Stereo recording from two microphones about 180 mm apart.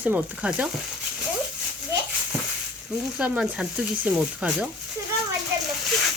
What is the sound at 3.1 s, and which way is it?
Speech, 5° right (ahead or behind).